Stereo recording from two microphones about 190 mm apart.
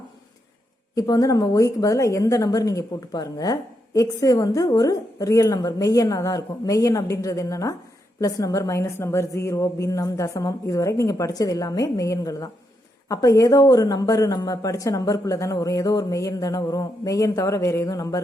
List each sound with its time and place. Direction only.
0.9 s speech: 20° left (ahead or behind)